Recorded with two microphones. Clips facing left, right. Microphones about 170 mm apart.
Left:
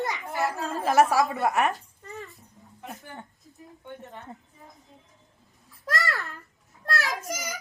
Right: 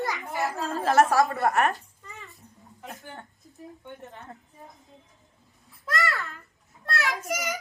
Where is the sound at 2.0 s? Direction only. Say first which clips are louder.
Left 7 dB; 40° left (ahead or behind).